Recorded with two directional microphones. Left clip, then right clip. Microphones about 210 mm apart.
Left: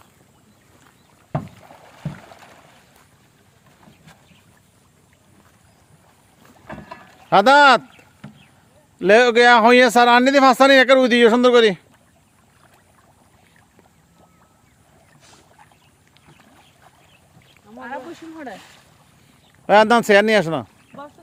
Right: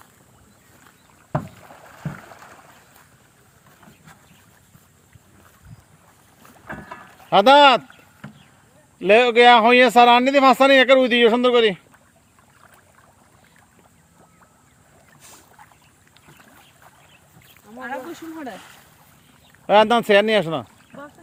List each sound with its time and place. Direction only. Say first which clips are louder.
2.0 s rowboat: right 1 dB; 15° left (ahead or behind)
6.7 s rowboat: right 1 dB; 30° left (ahead or behind)
8.2 s vehicle: right 2 dB; 5° left (ahead or behind)
9.0 s speech: left 1 dB; 35° left (ahead or behind)
15.2 s boat: right 2 dB; 50° right (ahead or behind)
17.7 s a sound: right 1 dB; 50° right (ahead or behind)
18.5 s boat: even; 15° left (ahead or behind)
19.6 s speech: left 2 dB; 30° left (ahead or behind)
20.9 s a sound: left 2 dB; 5° left (ahead or behind)